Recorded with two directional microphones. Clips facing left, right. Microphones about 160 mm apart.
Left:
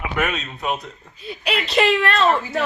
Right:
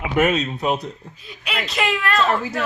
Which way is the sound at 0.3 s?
40° right (ahead or behind).